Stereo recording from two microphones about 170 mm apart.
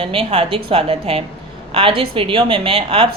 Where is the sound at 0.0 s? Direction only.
35° right (ahead or behind).